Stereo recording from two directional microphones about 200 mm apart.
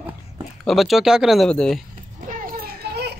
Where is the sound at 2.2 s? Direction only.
40° right (ahead or behind).